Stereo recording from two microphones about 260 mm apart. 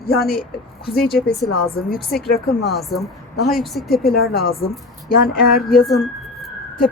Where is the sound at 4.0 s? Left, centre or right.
Left.